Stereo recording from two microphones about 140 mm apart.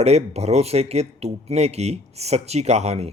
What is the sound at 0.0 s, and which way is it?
Speech, 50° right (ahead or behind).